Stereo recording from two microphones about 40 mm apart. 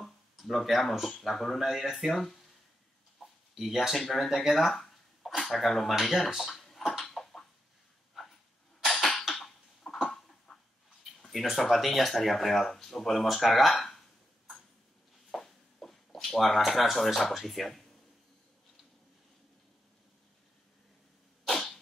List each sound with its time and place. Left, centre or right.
0.0 s a sound: centre
1.2 s speech: centre
3.5 s speech: centre
7.0 s a sound: centre
8.1 s dog: centre
8.8 s cough: centre
10.0 s a sound: centre
11.2 s speech: centre
15.3 s speech: centre
21.5 s sneeze: centre